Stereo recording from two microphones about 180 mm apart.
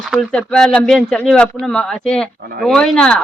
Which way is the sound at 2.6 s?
5° left (ahead or behind).